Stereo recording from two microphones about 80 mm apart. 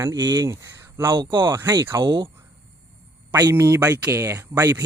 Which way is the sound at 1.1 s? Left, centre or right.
Right.